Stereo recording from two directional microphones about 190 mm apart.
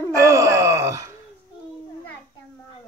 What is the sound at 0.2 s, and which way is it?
Groan, 15° right (ahead or behind).